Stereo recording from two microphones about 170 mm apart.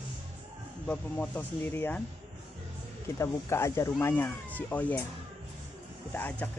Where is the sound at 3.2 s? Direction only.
15° left (ahead or behind).